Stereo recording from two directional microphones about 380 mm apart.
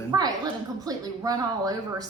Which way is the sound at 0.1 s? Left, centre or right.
Centre.